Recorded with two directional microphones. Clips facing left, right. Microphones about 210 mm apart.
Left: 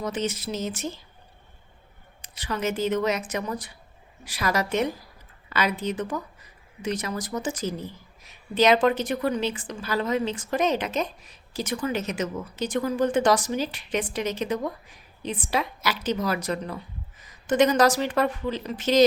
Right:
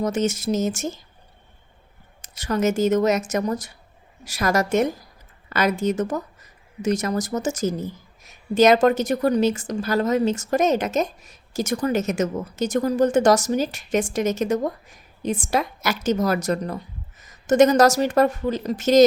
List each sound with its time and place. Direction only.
0.0 s a woman's voice: 45° right (ahead or behind)
2.2 s a woman's voice: 45° right (ahead or behind)